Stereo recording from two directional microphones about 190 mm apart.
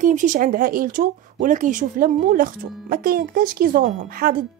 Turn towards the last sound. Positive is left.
turn(degrees=-50)  # may be behind; listen again after turning